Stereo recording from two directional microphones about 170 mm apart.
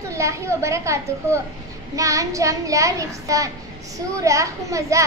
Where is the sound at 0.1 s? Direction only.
15° right (ahead or behind).